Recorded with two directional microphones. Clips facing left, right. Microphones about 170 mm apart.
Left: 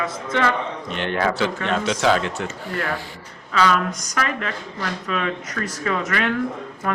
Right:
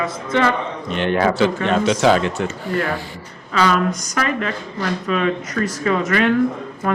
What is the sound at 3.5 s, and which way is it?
Speech, 35° right (ahead or behind).